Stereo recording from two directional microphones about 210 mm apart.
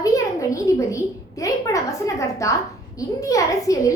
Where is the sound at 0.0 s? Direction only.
15° left (ahead or behind).